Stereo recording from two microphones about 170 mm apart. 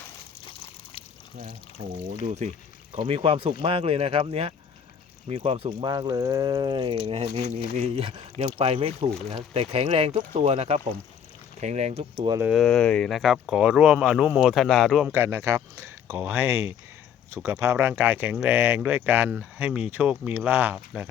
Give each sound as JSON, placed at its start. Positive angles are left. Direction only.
{"t": 2.4, "sound": "speech", "side_deg": -40}
{"t": 12.4, "sound": "speech", "side_deg": -5}
{"t": 15.1, "sound": "speech", "side_deg": -15}